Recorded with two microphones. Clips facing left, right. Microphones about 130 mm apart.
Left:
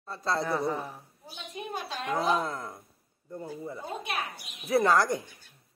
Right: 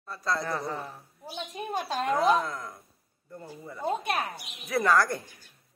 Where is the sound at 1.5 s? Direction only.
45° right (ahead or behind).